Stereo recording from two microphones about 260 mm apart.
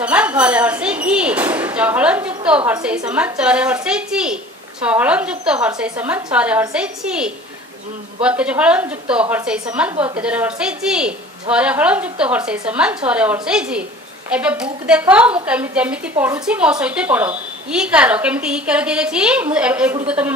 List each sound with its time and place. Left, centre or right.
0.0 s a woman's voice: centre
9.9 s a woman's voice: centre
10.2 s a woman's voice: centre